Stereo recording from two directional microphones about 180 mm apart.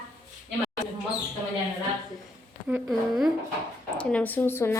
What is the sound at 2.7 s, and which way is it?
A woman's voice, centre (ahead or behind).